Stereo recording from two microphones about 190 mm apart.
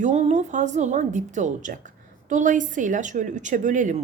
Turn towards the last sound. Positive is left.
turn(degrees=-40)  # may be behind; listen again after turning